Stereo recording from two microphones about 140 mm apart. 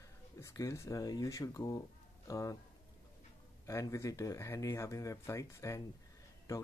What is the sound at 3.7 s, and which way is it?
Speech, 20° left (ahead or behind).